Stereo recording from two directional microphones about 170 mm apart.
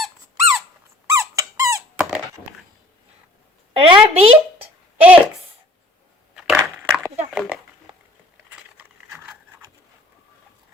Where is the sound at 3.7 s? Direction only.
35° right (ahead or behind).